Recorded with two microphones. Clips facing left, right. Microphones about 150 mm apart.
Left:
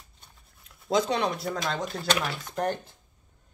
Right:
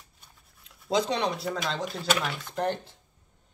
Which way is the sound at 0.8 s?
30° right (ahead or behind).